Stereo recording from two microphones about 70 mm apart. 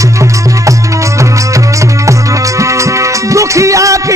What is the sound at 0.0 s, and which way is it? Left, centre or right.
Music, right.